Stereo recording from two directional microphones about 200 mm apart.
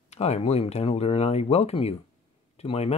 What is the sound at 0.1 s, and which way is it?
Speech, 35° left (ahead or behind).